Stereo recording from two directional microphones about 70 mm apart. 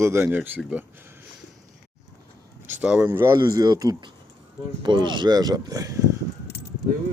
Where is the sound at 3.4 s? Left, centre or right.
Right.